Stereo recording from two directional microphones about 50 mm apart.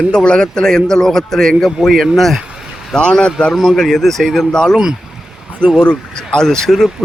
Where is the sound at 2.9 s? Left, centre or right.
Centre.